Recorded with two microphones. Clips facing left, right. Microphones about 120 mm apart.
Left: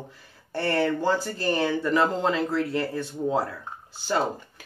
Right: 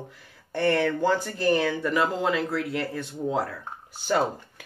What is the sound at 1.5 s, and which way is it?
Speech, 25° left (ahead or behind).